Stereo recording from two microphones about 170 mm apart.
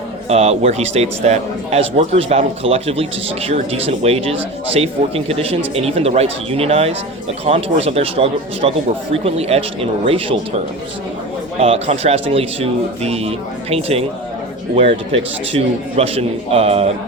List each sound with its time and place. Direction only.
0.3 s a man's voice: 40° right (ahead or behind)
11.6 s a man's voice: 35° right (ahead or behind)